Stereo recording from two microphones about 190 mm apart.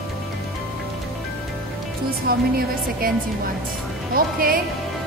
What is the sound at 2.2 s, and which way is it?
Speech, 50° right (ahead or behind).